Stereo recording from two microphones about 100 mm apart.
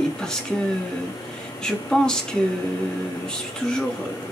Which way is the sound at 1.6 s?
5° left (ahead or behind).